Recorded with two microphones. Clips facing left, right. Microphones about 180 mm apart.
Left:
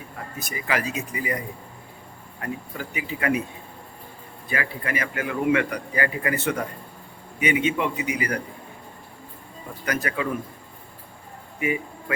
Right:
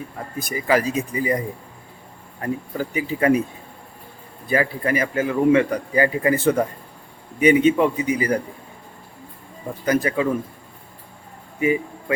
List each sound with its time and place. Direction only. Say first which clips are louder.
0.5 s a man's voice: right 7 dB; 35° right (ahead or behind)
2.4 s a man's voice: right 7 dB; 35° right (ahead or behind)
4.4 s a man's voice: right 8 dB; 35° right (ahead or behind)
9.8 s speech: right 7 dB; 25° right (ahead or behind)
11.6 s speech: right 6 dB; 30° right (ahead or behind)